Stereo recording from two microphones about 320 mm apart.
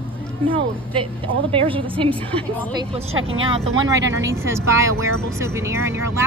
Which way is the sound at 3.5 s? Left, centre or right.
Centre.